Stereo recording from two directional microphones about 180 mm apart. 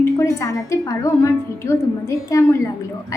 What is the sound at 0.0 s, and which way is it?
A woman's voice, 15° left (ahead or behind).